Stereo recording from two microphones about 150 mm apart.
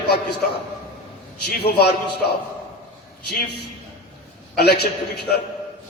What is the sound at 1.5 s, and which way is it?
Speech, 90° left.